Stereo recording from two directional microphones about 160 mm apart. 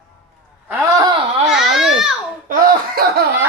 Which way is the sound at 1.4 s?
5° right (ahead or behind).